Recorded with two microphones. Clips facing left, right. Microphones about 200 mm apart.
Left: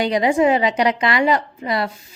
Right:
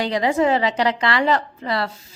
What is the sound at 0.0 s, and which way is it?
A woman's voice, 15° left (ahead or behind).